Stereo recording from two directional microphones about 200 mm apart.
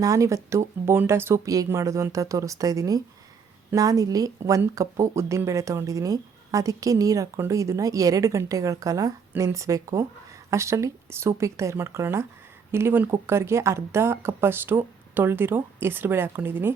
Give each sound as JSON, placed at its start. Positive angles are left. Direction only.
{"t": 0.0, "sound": "speech", "side_deg": -15}